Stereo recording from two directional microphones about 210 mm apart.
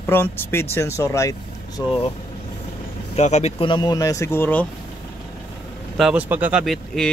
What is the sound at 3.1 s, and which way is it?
Speech, 30° left (ahead or behind).